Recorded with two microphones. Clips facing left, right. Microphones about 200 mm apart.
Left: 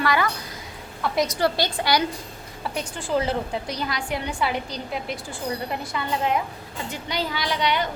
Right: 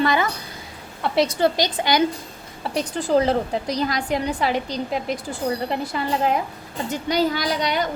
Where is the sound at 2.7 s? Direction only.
40° right (ahead or behind).